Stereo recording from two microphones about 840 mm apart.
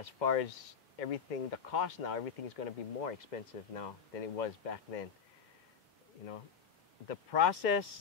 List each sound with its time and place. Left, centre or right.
0.0 s speech: left
7.1 s speech: left